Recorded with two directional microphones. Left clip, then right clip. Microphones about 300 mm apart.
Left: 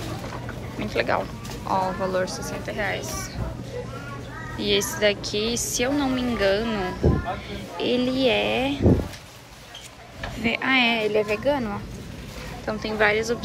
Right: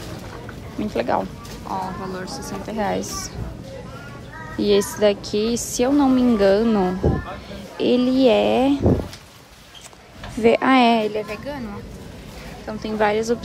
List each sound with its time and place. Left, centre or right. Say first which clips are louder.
0.7 s a woman's voice: right 2 dB; centre
4.6 s a woman's voice: right 5 dB; centre
10.4 s a woman's voice: right 6 dB; centre
11.1 s a woman's voice: left 5 dB; centre